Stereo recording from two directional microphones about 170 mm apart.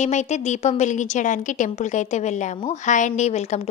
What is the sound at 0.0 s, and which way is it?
A woman's voice, 40° left (ahead or behind).